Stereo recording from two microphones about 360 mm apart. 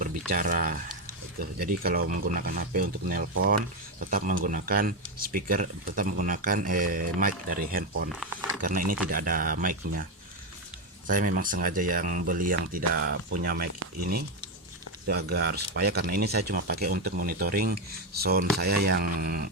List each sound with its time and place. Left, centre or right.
0.3 s speech: right
8.1 s speech: centre
8.9 s speech: right
15.4 s speech: right